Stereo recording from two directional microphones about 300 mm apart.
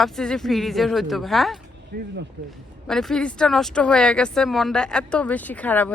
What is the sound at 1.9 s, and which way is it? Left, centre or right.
Speech, right.